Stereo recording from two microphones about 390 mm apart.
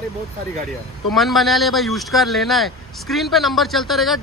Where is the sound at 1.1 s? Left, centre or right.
Centre.